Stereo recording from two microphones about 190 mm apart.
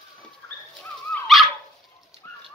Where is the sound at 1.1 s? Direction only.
Centre (ahead or behind).